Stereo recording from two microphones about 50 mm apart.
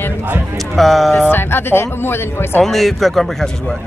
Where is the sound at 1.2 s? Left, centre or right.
Left.